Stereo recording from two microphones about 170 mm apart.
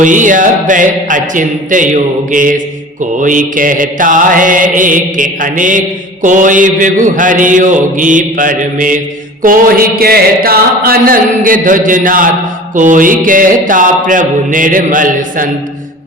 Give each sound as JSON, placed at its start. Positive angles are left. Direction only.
{"t": 0.0, "sound": "mantra", "side_deg": -50}
{"t": 9.4, "sound": "a sound", "side_deg": -55}
{"t": 12.7, "sound": "mantra", "side_deg": -50}